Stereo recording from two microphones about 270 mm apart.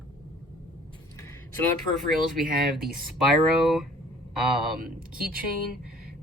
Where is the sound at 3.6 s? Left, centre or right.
Centre.